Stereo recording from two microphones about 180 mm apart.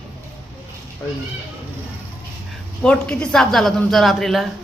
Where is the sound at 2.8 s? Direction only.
5° left (ahead or behind).